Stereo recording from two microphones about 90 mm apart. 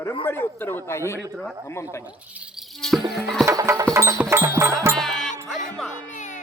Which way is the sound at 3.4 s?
35° right (ahead or behind).